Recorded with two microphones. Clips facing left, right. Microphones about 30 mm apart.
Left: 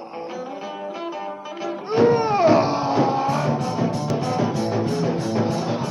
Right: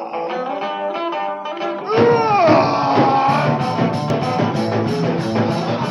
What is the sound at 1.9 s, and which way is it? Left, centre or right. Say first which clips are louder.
Music: right 4 dB; right.